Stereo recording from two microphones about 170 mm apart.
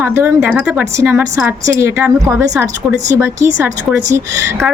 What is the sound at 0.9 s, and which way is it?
Speech, 15° right (ahead or behind).